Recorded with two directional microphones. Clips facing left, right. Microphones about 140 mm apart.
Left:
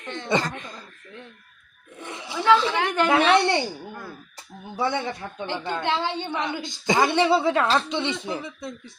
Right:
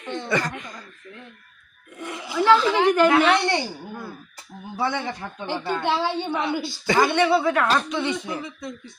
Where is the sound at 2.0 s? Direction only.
25° left (ahead or behind).